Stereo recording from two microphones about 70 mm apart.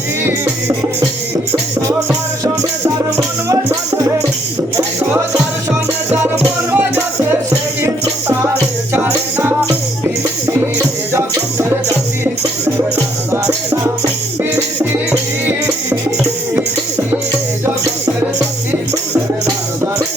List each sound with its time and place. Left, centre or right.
6.1 s music: right
8.9 s music: right
15.4 s music: right